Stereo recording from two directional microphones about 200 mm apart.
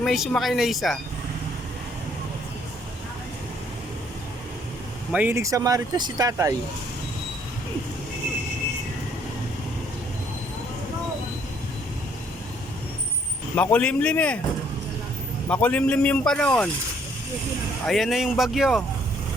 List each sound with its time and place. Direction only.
0.0 s a man's voice: centre (ahead or behind)
5.1 s speech: 10° right (ahead or behind)
13.6 s a man's voice: 5° left (ahead or behind)
15.4 s a man's voice: 5° left (ahead or behind)
17.8 s a man's voice: centre (ahead or behind)